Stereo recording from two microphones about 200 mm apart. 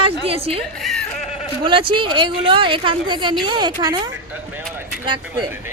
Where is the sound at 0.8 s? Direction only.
Centre (ahead or behind).